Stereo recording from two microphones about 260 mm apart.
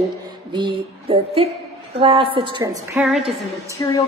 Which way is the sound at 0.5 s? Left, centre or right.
Centre.